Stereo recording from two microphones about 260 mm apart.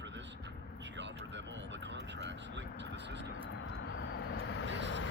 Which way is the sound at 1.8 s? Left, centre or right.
Right.